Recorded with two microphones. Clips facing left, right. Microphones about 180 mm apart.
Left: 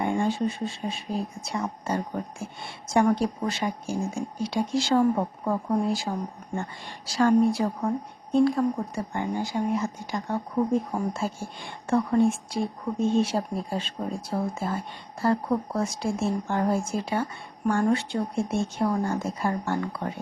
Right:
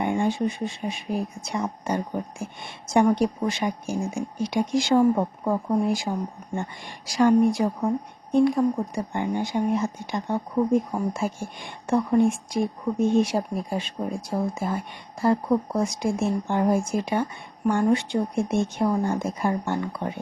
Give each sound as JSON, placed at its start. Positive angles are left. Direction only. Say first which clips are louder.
{"t": 0.0, "sound": "a woman's voice", "louder": "right 1 dB", "side_deg": -20}
{"t": 5.1, "sound": "speech", "louder": "right 2 dB", "side_deg": -5}
{"t": 5.8, "sound": "a woman's voice", "louder": "right 2 dB", "side_deg": -15}